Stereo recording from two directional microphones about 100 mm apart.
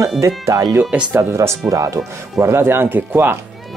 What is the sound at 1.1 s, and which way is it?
Speech, 25° right (ahead or behind).